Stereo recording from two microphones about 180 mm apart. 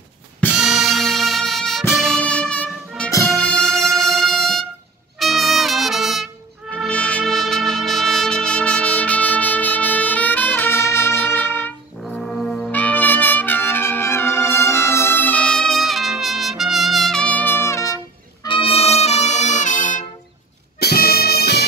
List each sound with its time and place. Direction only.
0.5 s music: 5° right (ahead or behind)
3.1 s music: 15° left (ahead or behind)
3.5 s music: centre (ahead or behind)
5.2 s trumpet: centre (ahead or behind)
12.0 s brass instrument: 5° left (ahead or behind); by 20.1 s 45° left (ahead or behind)
20.8 s music: 60° left (ahead or behind)